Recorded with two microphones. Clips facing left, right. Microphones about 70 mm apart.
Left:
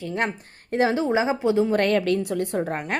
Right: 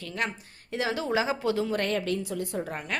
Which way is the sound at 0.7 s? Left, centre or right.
Left.